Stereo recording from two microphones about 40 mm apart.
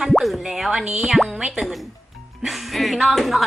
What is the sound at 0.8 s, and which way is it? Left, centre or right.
Speech, right.